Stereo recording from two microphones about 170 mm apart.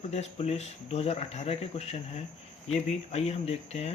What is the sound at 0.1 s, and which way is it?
Speech, 40° left (ahead or behind).